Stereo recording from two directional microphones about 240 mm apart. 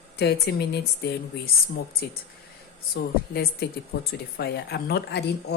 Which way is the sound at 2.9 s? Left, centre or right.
Left.